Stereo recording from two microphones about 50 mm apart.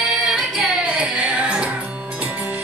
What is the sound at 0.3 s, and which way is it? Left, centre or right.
Music, centre.